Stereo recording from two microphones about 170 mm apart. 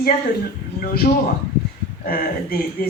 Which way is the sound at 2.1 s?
60° left (ahead or behind).